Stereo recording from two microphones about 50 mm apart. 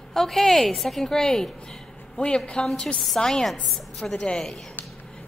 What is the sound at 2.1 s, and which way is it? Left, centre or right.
A woman's voice, left.